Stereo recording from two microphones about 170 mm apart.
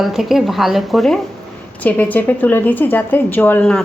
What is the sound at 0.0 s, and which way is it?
A woman's voice, centre (ahead or behind).